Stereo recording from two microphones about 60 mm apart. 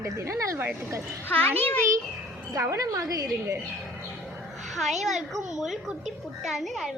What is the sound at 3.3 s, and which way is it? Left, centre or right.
Speech, right.